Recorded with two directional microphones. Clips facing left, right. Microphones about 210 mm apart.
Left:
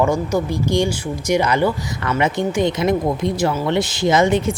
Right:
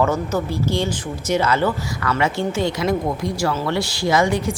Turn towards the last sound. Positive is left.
turn(degrees=20)  # may be behind; listen again after turning